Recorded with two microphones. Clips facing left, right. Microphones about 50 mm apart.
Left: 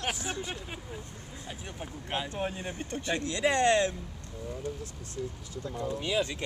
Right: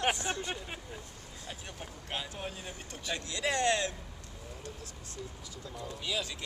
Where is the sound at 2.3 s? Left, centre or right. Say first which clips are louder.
Left 7 dB; left.